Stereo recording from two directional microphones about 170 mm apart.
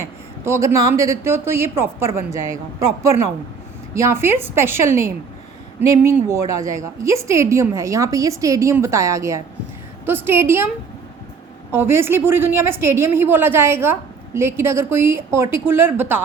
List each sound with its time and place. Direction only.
0.0 s a woman's voice: 15° right (ahead or behind)
6.1 s a woman's voice: 15° right (ahead or behind)
11.7 s a woman's voice: 15° right (ahead or behind)